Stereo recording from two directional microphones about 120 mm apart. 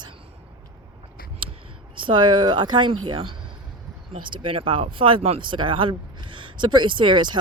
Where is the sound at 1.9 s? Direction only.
45° right (ahead or behind).